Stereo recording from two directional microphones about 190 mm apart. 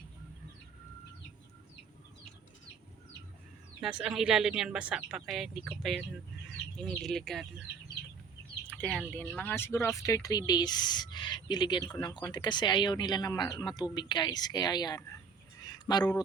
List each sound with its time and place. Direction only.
3.8 s a woman's voice: 5° right (ahead or behind)
8.7 s a woman's voice: 5° left (ahead or behind); by 15.2 s 20° left (ahead or behind)
15.6 s a sound: 20° left (ahead or behind)